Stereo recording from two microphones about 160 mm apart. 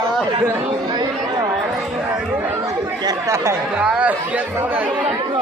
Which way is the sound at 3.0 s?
20° right (ahead or behind).